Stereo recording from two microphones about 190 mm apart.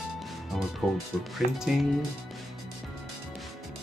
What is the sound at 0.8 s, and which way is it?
Speech, centre (ahead or behind).